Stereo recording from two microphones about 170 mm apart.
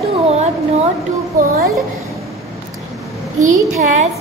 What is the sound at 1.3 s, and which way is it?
Speech, 50° right (ahead or behind).